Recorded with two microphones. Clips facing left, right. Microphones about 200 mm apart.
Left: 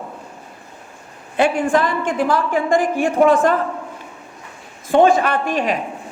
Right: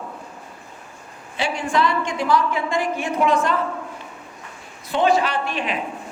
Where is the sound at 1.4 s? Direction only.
55° left (ahead or behind).